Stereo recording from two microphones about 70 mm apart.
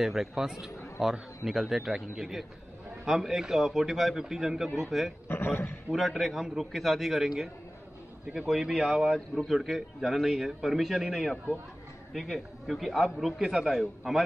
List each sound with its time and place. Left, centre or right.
0.0 s a man's voice: centre
5.3 s a man's voice: left
5.9 s a man's voice: centre